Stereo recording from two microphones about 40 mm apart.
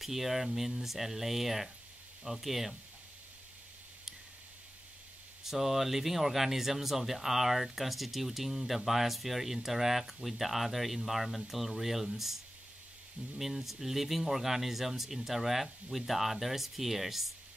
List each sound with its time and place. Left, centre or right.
0.0 s speech: centre
5.4 s speech: centre
13.4 s speech: centre